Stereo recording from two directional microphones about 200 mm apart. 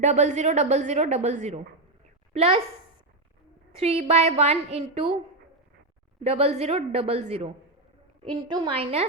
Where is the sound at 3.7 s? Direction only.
30° right (ahead or behind).